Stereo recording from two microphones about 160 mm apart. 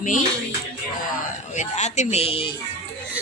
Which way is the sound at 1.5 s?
45° left (ahead or behind).